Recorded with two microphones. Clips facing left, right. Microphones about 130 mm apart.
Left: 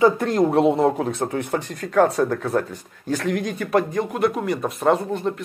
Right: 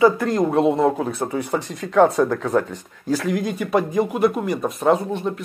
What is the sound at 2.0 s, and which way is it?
Speech, 20° right (ahead or behind).